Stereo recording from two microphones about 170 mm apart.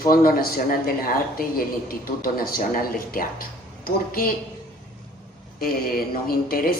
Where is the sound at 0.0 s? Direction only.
60° left (ahead or behind).